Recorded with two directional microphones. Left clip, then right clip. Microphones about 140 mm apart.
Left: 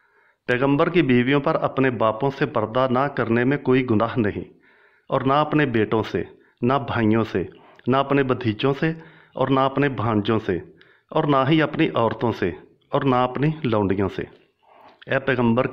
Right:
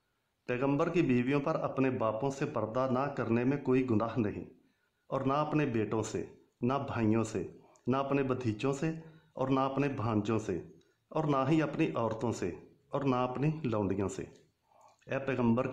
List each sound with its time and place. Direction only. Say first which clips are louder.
0.5 s speech: left 12 dB; 15° left (ahead or behind)